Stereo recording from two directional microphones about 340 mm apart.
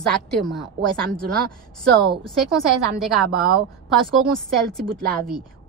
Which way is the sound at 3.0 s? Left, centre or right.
Centre.